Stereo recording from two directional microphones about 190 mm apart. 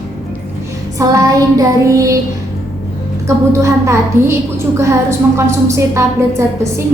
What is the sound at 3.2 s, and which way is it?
A woman's voice, 15° right (ahead or behind).